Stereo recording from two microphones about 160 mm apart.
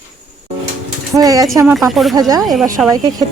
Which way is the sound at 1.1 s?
20° right (ahead or behind).